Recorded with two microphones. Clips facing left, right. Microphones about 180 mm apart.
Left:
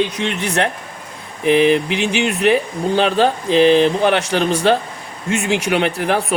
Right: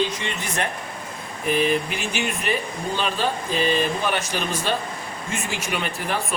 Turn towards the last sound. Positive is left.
turn(degrees=70)  # may be behind; listen again after turning